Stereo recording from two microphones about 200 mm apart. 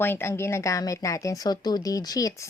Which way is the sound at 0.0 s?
10° left (ahead or behind).